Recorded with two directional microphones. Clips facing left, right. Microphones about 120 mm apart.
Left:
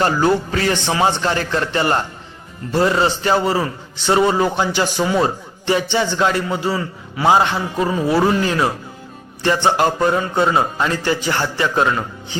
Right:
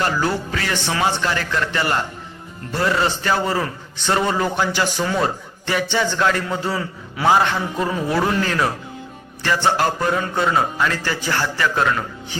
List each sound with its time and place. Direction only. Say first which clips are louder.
0.0 s a man's voice: left 5 dB; 30° left (ahead or behind)
2.9 s speech: left 3 dB; 20° left (ahead or behind)
6.4 s a man's voice: left 3 dB; 5° left (ahead or behind)
7.3 s speech: left 2 dB; 20° left (ahead or behind)
7.8 s speech: left 5 dB; 10° left (ahead or behind)